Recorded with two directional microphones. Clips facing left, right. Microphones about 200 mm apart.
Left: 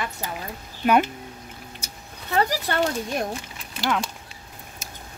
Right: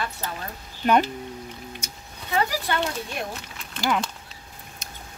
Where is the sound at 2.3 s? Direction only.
40° left (ahead or behind).